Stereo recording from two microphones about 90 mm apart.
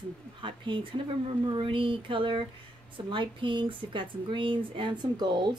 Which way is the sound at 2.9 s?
65° right (ahead or behind).